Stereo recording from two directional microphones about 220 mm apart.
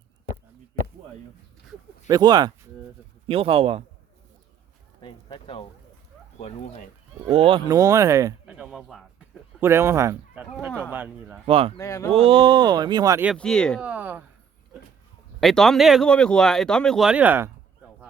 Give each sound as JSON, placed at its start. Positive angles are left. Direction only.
{"t": 2.0, "sound": "speech", "side_deg": -15}
{"t": 5.0, "sound": "speech", "side_deg": 20}
{"t": 6.4, "sound": "speech", "side_deg": 35}
{"t": 7.2, "sound": "speech", "side_deg": -25}
{"t": 11.4, "sound": "speech", "side_deg": -25}
{"t": 11.8, "sound": "speech", "side_deg": 15}
{"t": 12.1, "sound": "speech", "side_deg": -25}
{"t": 13.2, "sound": "speech", "side_deg": 5}
{"t": 13.8, "sound": "speech", "side_deg": -5}
{"t": 15.4, "sound": "speech", "side_deg": 0}